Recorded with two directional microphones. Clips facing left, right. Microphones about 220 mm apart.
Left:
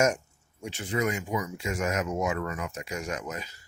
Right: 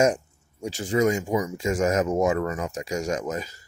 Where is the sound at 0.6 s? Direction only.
40° right (ahead or behind).